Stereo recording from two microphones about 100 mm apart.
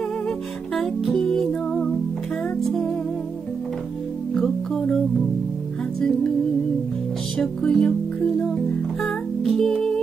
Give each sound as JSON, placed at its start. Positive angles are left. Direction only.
{"t": 0.7, "sound": "music", "side_deg": 5}
{"t": 4.4, "sound": "music", "side_deg": 5}
{"t": 5.9, "sound": "music", "side_deg": 5}
{"t": 7.3, "sound": "music", "side_deg": 5}
{"t": 9.0, "sound": "music", "side_deg": 5}